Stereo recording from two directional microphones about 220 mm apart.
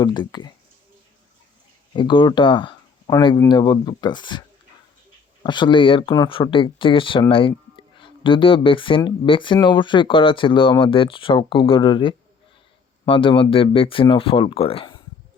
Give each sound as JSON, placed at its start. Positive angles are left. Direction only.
{"t": 0.0, "sound": "speech", "side_deg": 20}
{"t": 1.9, "sound": "speech", "side_deg": 20}